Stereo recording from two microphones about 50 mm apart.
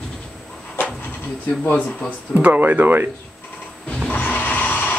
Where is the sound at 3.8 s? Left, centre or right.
Left.